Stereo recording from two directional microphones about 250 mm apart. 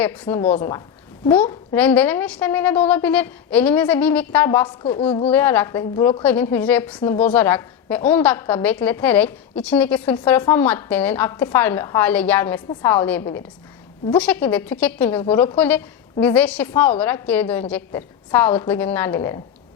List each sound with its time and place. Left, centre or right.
0.0 s a woman's voice: centre
4.8 s a woman's voice: left
5.3 s a woman's voice: centre